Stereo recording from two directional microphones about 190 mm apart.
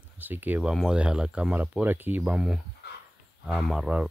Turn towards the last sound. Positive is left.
turn(degrees=-5)  # may be behind; listen again after turning